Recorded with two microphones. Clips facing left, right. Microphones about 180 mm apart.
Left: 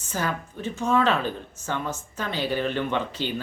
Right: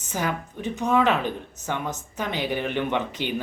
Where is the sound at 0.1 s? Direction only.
15° right (ahead or behind).